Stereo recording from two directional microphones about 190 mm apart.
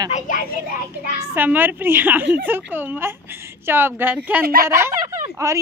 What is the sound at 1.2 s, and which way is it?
A woman's voice, 10° right (ahead or behind).